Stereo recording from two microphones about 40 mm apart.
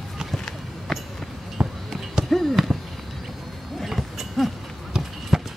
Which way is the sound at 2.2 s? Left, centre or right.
Centre.